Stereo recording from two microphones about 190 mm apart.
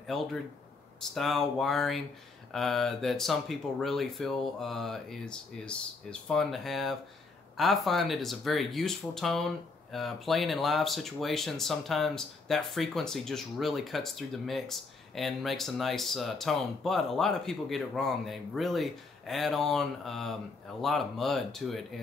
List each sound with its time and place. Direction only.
0.0 s speech: centre (ahead or behind)